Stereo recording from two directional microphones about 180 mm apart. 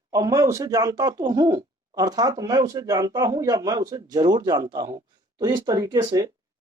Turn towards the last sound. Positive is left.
turn(degrees=-20)  # may be behind; listen again after turning